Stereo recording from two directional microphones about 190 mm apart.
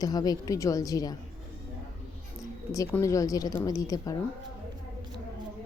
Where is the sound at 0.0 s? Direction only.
20° left (ahead or behind).